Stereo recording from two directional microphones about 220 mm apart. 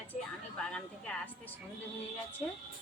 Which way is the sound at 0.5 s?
5° left (ahead or behind).